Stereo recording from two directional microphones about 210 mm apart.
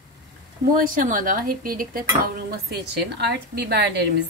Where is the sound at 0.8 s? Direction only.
40° right (ahead or behind).